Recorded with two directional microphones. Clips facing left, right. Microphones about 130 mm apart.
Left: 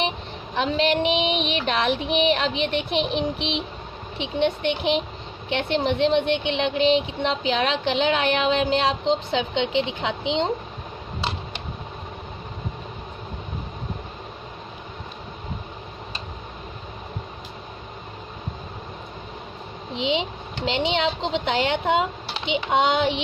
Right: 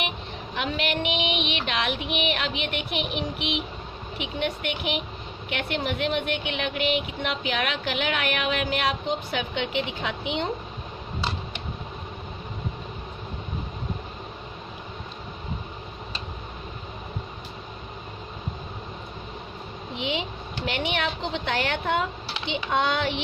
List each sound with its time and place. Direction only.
0.5 s child singing: 35° left (ahead or behind)
4.2 s speech: 30° left (ahead or behind)
20.0 s speech: 20° left (ahead or behind)